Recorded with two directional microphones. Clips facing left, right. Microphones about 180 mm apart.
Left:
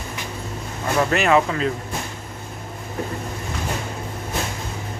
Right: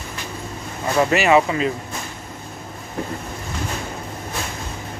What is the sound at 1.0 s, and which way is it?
Speech, 5° right (ahead or behind).